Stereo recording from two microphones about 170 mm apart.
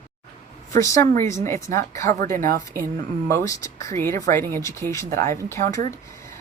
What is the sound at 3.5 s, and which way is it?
Speech, 20° left (ahead or behind).